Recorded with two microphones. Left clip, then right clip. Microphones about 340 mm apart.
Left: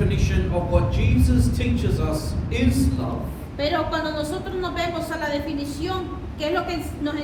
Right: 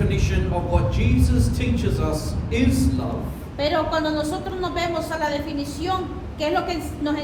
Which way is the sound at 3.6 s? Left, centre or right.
Right.